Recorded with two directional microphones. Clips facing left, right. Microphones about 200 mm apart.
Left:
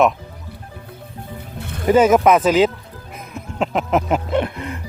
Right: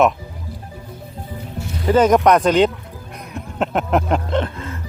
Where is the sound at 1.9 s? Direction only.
5° left (ahead or behind).